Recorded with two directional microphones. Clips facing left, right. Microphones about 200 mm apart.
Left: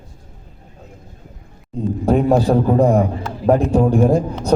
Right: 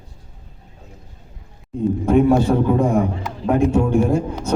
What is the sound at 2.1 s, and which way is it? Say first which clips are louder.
A man's voice: even; 35° left (ahead or behind).